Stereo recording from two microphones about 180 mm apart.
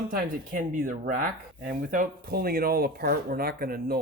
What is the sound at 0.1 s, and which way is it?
Speech, 50° right (ahead or behind).